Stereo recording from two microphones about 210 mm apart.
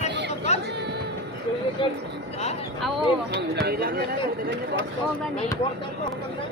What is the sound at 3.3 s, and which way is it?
Speech, 50° right (ahead or behind).